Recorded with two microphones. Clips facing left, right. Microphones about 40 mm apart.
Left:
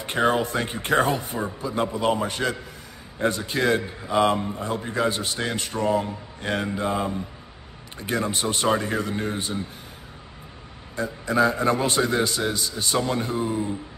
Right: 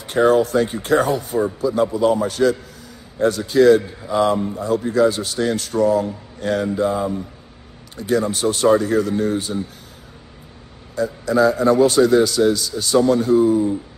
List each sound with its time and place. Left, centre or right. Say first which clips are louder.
0.0 s a man's voice: right 7 dB; left
8.0 s a man's voice: right 7 dB; left
11.0 s a man's voice: right 5 dB; left